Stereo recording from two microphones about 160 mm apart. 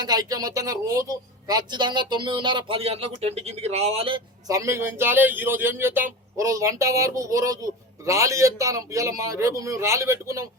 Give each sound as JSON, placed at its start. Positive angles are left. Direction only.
{"t": 0.0, "sound": "a man's voice", "side_deg": -25}
{"t": 4.4, "sound": "a man's voice", "side_deg": -20}